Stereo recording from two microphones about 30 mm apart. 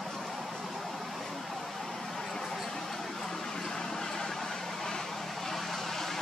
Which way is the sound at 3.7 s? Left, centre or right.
Centre.